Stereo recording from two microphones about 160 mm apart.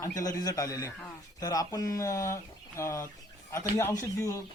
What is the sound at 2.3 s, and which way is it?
Chicken, 15° left (ahead or behind).